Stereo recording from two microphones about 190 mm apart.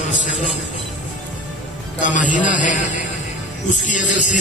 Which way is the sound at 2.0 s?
40° left (ahead or behind).